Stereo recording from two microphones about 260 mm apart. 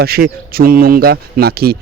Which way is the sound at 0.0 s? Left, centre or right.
Right.